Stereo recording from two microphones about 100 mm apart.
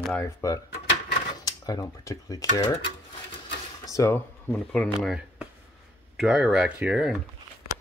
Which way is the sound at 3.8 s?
35° left (ahead or behind).